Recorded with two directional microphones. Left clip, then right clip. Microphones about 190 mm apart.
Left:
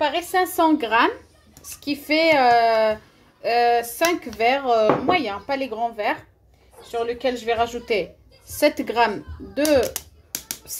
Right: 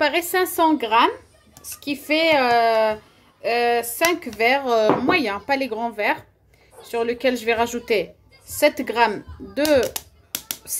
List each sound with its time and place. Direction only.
0.0 s speech: 35° right (ahead or behind)
0.6 s speech: 15° right (ahead or behind)
4.7 s speech: 35° right (ahead or behind)
6.9 s speech: 45° right (ahead or behind)
8.5 s speech: 15° right (ahead or behind)